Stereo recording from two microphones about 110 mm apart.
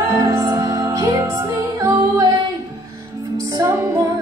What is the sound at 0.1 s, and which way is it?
Music, 25° right (ahead or behind).